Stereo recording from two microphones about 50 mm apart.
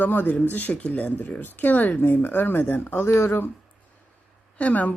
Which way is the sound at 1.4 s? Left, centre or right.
Left.